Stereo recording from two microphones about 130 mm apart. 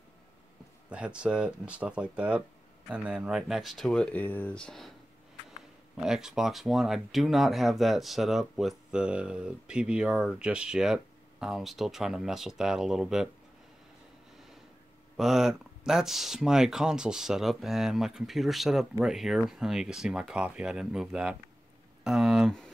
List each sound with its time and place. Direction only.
0.8 s speech: 10° right (ahead or behind)
5.9 s speech: 5° right (ahead or behind)
15.1 s speech: centre (ahead or behind)